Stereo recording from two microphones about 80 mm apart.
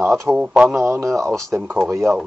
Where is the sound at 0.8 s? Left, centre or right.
Right.